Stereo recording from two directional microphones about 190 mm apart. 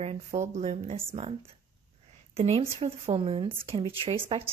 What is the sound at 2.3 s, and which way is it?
A woman's voice, 35° right (ahead or behind).